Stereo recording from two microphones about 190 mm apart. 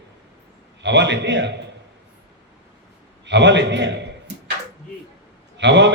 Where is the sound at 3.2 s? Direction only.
65° right (ahead or behind).